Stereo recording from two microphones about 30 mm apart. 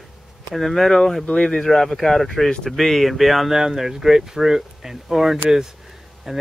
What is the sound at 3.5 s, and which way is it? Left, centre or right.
Speech, centre.